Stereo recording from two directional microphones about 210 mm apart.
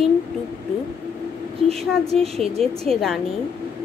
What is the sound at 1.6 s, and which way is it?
Speech, 30° right (ahead or behind).